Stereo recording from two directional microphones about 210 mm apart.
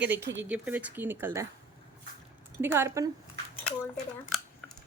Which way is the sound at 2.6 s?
10° right (ahead or behind).